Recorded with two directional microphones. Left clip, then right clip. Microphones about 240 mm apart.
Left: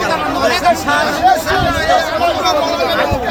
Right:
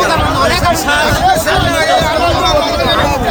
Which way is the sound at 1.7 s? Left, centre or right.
Centre.